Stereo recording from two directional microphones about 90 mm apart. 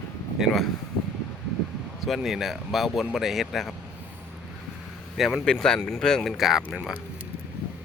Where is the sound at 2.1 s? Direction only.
5° right (ahead or behind).